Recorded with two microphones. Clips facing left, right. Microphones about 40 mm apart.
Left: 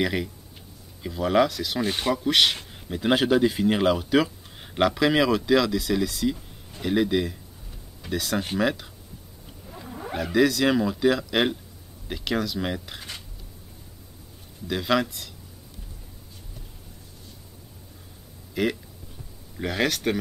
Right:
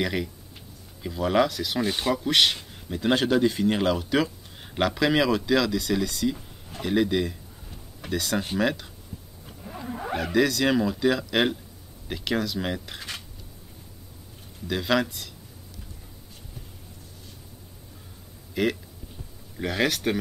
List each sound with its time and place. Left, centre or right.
0.0 s speech: centre
9.8 s roaring cats: right
10.1 s speech: centre
14.7 s speech: centre
18.5 s speech: centre